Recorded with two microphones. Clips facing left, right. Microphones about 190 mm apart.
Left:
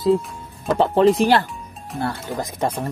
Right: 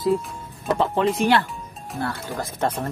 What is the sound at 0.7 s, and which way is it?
Speech, 35° left (ahead or behind).